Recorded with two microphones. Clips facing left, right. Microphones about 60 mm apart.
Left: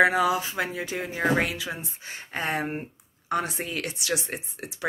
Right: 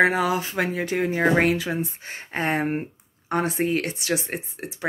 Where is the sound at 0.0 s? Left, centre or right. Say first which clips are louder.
Right 1 dB; right.